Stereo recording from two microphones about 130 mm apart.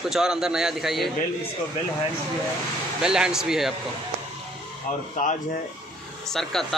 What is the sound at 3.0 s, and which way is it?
Speech, 5° right (ahead or behind).